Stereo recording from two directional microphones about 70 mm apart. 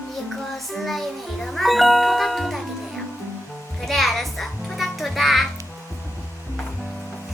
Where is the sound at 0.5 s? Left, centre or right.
Centre.